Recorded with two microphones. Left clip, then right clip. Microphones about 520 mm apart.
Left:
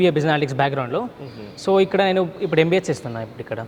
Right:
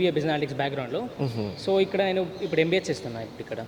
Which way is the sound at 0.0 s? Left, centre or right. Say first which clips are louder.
Left 7 dB; left.